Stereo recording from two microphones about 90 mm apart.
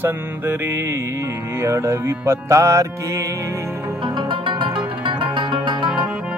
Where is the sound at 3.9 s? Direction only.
65° right (ahead or behind).